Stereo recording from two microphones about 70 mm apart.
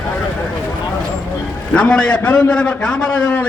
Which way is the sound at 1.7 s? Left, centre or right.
Centre.